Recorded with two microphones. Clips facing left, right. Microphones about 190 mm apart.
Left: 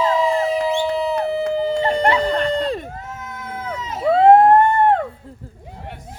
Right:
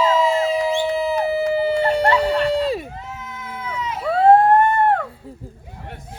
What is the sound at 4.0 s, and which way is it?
Emergency vehicle, 20° left (ahead or behind).